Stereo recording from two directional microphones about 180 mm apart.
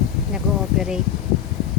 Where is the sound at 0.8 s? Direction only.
5° right (ahead or behind).